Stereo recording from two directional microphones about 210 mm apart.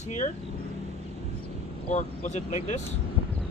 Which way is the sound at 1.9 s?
35° left (ahead or behind).